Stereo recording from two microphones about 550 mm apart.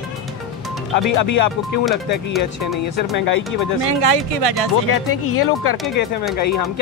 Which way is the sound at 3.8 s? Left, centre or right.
Right.